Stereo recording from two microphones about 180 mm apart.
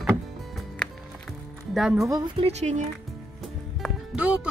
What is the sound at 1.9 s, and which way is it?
Speech, 20° right (ahead or behind).